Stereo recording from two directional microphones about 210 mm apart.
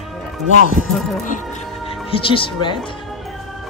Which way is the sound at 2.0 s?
25° left (ahead or behind).